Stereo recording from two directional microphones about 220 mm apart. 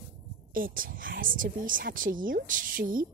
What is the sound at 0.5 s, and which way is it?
Speech, 40° right (ahead or behind).